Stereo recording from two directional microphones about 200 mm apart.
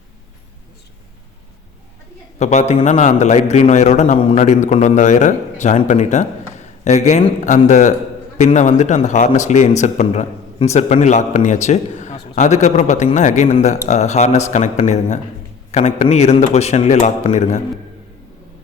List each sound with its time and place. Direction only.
2.4 s speech: 35° left (ahead or behind)